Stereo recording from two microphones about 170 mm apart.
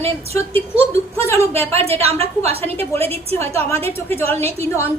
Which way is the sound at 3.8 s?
15° left (ahead or behind).